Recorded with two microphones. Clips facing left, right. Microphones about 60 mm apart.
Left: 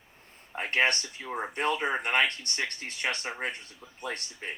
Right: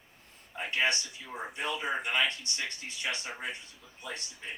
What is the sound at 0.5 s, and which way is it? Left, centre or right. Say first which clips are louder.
Speech: left 4 dB; left.